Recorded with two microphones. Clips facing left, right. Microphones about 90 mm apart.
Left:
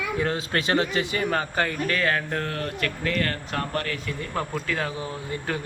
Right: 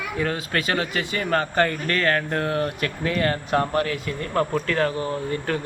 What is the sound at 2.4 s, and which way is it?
Speech, 15° right (ahead or behind).